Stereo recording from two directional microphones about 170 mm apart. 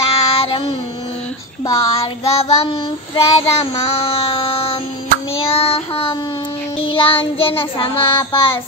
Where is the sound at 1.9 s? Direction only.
35° left (ahead or behind).